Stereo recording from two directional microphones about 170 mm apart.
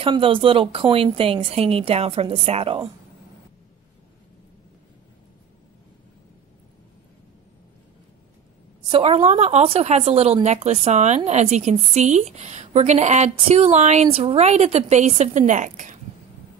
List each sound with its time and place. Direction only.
0.0 s speech: 30° right (ahead or behind)
8.8 s speech: 35° right (ahead or behind)